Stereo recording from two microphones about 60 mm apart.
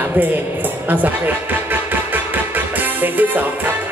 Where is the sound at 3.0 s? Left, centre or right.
Right.